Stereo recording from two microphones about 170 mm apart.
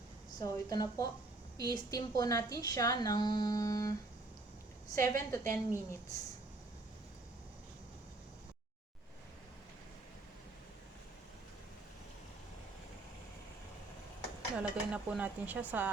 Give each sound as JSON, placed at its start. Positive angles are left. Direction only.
{"t": 0.3, "sound": "a woman's voice", "side_deg": 20}
{"t": 4.9, "sound": "a woman's voice", "side_deg": 15}
{"t": 14.5, "sound": "speech", "side_deg": -5}